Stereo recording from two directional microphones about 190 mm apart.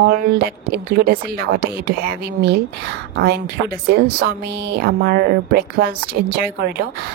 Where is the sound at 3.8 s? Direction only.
55° right (ahead or behind).